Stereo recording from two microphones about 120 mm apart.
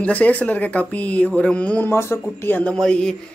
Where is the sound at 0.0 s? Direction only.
10° left (ahead or behind).